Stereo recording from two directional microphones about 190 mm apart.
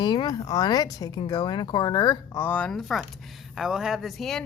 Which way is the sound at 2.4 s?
10° left (ahead or behind).